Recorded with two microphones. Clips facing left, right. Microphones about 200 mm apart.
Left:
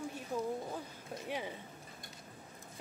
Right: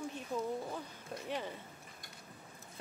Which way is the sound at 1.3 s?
10° left (ahead or behind).